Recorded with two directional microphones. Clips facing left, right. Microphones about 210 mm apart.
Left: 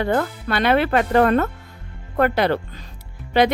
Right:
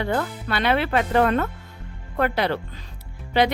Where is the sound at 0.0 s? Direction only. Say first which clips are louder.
Left 4 dB; 45° left (ahead or behind).